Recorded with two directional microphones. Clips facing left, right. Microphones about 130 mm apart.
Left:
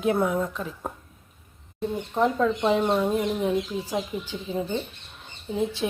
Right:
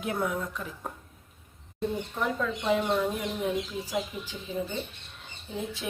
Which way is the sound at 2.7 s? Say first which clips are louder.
Left 4 dB; 25° left (ahead or behind).